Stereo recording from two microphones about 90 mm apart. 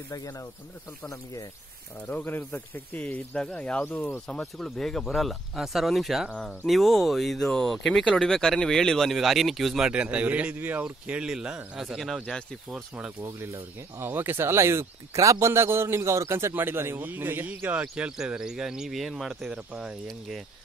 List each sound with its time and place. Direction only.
0.1 s speech: 40° left (ahead or behind)
2.0 s speech: 20° left (ahead or behind); by 9.8 s centre (ahead or behind)
9.8 s speech: 15° right (ahead or behind)
12.3 s speech: 5° left (ahead or behind)
13.2 s speech: 25° right (ahead or behind); by 20.0 s 10° right (ahead or behind)
20.1 s speech: centre (ahead or behind)